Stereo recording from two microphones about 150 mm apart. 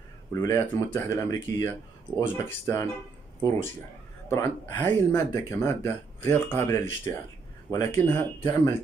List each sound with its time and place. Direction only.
0.3 s speech: 20° left (ahead or behind)
4.3 s speech: 20° left (ahead or behind)